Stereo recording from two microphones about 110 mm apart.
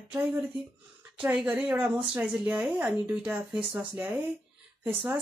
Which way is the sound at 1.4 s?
15° right (ahead or behind).